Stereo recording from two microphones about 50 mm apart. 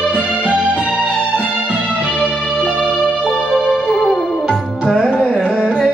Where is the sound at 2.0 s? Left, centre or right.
Centre.